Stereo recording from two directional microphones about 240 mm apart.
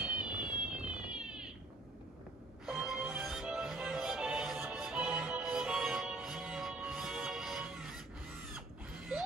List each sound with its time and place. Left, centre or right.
0.0 s cat: centre
2.6 s music: centre